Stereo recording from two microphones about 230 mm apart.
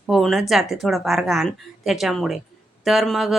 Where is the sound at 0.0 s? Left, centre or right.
Centre.